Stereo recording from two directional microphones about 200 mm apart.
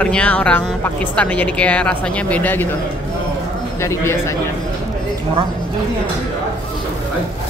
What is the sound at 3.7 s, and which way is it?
Speech, 15° left (ahead or behind).